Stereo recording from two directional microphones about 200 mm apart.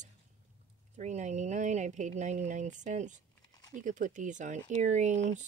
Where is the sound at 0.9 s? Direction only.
35° right (ahead or behind).